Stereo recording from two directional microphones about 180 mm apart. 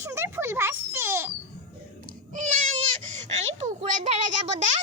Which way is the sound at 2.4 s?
45° right (ahead or behind).